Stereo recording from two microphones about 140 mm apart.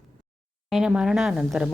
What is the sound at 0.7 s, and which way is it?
Speech, 5° right (ahead or behind).